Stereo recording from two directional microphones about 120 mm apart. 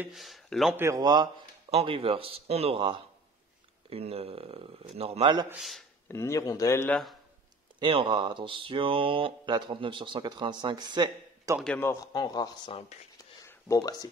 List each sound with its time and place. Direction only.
0.1 s speech: centre (ahead or behind)
0.7 s a man's voice: 25° right (ahead or behind)
1.0 s speech: 35° right (ahead or behind)
1.7 s speech: 55° right (ahead or behind)
5.6 s speech: centre (ahead or behind)
6.0 s speech: 25° left (ahead or behind)
7.8 s speech: 45° right (ahead or behind)
11.8 s a man's voice: 25° left (ahead or behind)